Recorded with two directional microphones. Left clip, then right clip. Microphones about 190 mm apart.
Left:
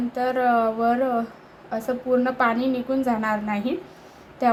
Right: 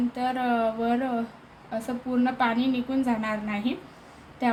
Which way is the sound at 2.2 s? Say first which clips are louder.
Left 3 dB; 20° left (ahead or behind).